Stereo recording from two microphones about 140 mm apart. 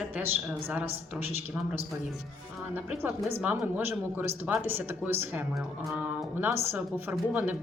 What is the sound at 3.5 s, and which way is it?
Speech, 15° right (ahead or behind).